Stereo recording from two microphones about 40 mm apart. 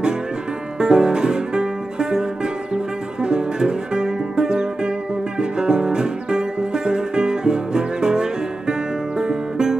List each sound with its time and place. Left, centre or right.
0.7 s music: centre